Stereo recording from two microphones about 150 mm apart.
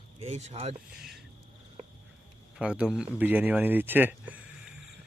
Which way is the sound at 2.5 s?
5° right (ahead or behind).